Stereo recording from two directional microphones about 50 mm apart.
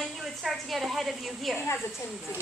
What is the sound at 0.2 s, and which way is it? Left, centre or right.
A woman's voice, centre.